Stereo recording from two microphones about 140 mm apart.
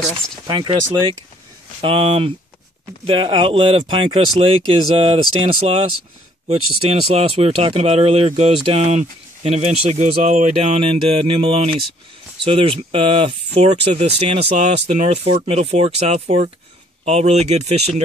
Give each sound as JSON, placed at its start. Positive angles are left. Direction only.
{"t": 0.5, "sound": "speech", "side_deg": -35}
{"t": 1.8, "sound": "speech", "side_deg": -40}